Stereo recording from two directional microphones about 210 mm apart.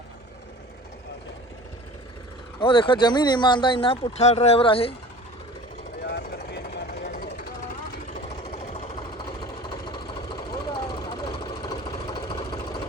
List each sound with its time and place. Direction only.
2.6 s speech: 25° left (ahead or behind)
6.1 s vehicle: 50° left (ahead or behind)
8.1 s engine: 30° left (ahead or behind)